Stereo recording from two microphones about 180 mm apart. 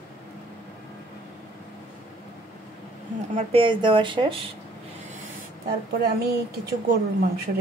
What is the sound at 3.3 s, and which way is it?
Speech, 30° right (ahead or behind).